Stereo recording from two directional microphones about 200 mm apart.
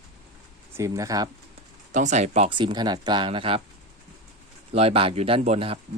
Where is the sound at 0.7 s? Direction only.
15° right (ahead or behind).